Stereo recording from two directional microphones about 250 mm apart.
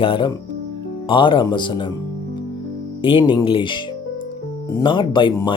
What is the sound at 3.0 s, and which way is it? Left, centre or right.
Speech, centre.